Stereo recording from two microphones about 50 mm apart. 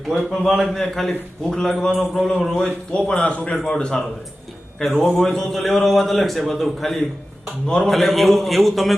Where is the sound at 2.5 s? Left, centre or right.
Centre.